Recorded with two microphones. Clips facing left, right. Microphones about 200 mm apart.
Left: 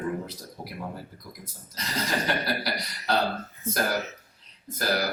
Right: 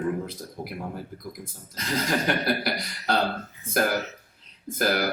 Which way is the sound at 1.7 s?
50° right (ahead or behind).